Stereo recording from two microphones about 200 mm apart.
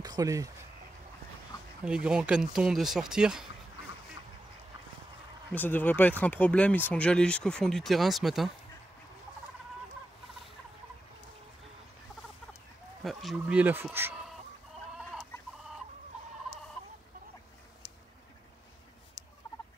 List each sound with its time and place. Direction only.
0.0 s speech: 20° right (ahead or behind)
2.0 s speech: 5° right (ahead or behind)
5.5 s speech: 10° left (ahead or behind)
13.0 s speech: centre (ahead or behind)